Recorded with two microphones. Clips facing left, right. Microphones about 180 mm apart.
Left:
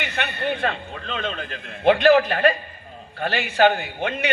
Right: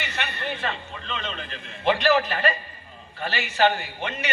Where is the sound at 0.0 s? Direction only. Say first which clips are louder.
Left 5 dB; 55° left (ahead or behind).